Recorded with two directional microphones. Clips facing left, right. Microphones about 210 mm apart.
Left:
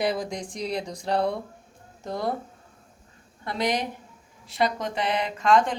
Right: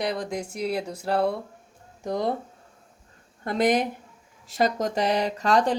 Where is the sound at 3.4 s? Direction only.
50° right (ahead or behind).